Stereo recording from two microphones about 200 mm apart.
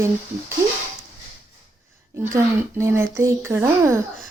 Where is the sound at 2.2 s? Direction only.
15° right (ahead or behind).